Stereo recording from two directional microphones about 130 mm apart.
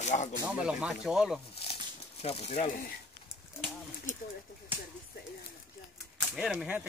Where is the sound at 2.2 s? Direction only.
55° left (ahead or behind).